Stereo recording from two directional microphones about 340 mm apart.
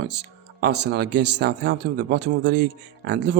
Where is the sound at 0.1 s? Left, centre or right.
Right.